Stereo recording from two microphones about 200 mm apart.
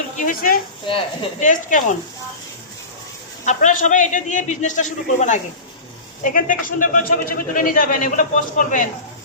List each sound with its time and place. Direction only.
0.2 s speech: 45° left (ahead or behind)
0.9 s speech: 25° left (ahead or behind)
1.5 s a man's voice: 40° left (ahead or behind)
3.4 s a man's voice: 40° left (ahead or behind)